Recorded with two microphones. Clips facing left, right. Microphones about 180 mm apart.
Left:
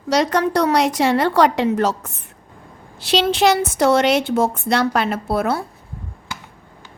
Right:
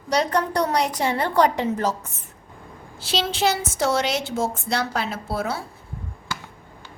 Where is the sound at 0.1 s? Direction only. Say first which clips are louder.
Left 5 dB; 90° left; by 5.6 s 60° left (ahead or behind).